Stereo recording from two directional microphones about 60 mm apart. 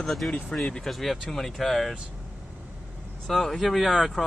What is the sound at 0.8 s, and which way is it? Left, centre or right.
Speech, centre.